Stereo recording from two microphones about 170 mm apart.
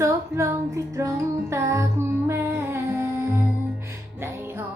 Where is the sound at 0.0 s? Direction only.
15° right (ahead or behind).